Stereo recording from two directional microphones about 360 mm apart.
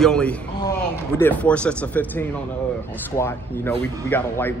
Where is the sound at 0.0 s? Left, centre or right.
Centre.